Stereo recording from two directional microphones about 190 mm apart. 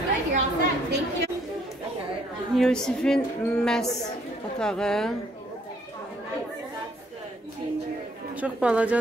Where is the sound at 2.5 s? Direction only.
5° left (ahead or behind).